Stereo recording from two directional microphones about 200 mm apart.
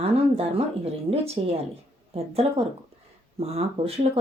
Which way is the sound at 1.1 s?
30° right (ahead or behind).